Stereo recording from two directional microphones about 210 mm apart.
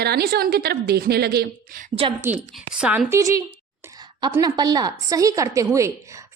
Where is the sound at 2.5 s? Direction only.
Centre (ahead or behind).